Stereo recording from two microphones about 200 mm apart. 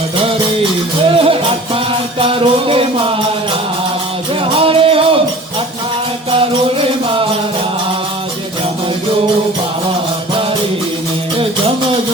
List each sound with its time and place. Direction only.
1.1 s music: 25° right (ahead or behind)
4.5 s music: 25° right (ahead or behind)